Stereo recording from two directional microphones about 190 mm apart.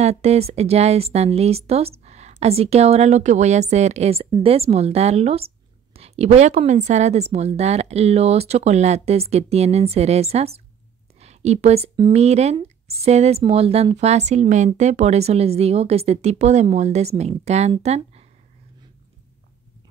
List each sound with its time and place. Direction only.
0.0 s speech: 35° right (ahead or behind)